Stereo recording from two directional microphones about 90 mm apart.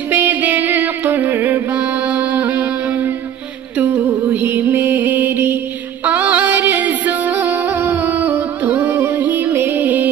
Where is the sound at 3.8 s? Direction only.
20° right (ahead or behind).